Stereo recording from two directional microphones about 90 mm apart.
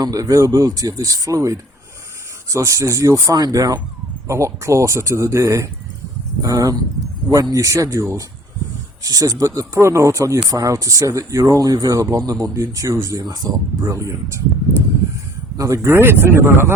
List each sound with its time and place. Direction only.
0.0 s speech: 40° right (ahead or behind)
9.0 s speech: 40° right (ahead or behind)
15.5 s speech: 35° right (ahead or behind)